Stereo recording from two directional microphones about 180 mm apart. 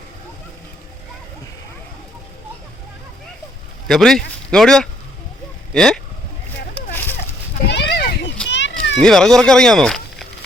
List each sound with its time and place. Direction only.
3.8 s speech: centre (ahead or behind)
6.7 s a sound: 10° left (ahead or behind)
7.7 s children playing: 70° left (ahead or behind)
8.4 s children playing: 80° left
9.0 s speech: 5° left (ahead or behind)